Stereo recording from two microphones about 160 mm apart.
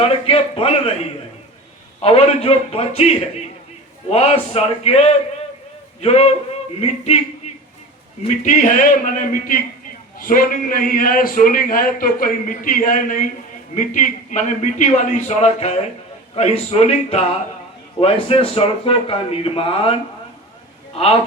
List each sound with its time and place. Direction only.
0.0 s speech: 35° left (ahead or behind)
2.0 s speech: 40° left (ahead or behind)
8.4 s a man's voice: 50° left (ahead or behind); by 19.9 s 35° left (ahead or behind)
20.9 s a woman's voice: 35° left (ahead or behind)